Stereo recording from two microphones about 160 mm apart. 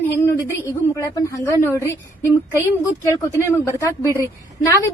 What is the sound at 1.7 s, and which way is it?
Speech, 15° right (ahead or behind).